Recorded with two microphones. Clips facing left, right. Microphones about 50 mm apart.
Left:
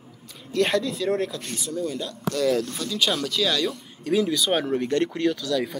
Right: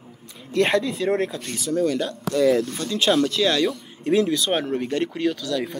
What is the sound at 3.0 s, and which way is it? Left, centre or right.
Speech, centre.